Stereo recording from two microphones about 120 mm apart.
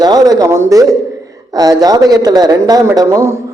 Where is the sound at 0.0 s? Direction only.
35° right (ahead or behind).